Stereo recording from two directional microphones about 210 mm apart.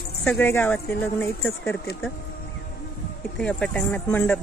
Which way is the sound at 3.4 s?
5° left (ahead or behind).